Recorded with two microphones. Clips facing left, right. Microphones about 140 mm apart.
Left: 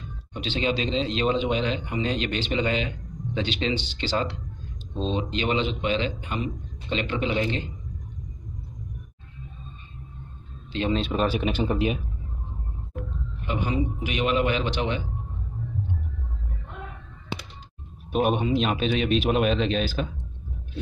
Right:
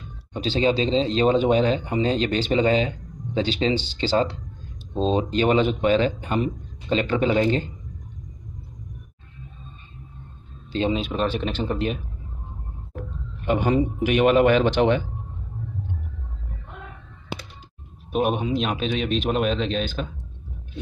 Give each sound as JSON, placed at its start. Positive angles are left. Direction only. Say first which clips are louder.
{"t": 0.3, "sound": "a man's voice", "louder": "right 5 dB", "side_deg": -35}
{"t": 10.9, "sound": "a man's voice", "louder": "left 2 dB", "side_deg": 0}
{"t": 13.5, "sound": "a man's voice", "louder": "right 6 dB", "side_deg": -50}
{"t": 18.1, "sound": "a man's voice", "louder": "even", "side_deg": 0}